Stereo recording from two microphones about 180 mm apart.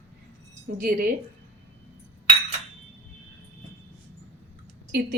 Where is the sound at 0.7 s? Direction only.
45° right (ahead or behind).